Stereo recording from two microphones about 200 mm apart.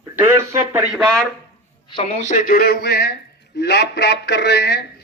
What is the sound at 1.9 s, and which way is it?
A man's voice, 30° left (ahead or behind).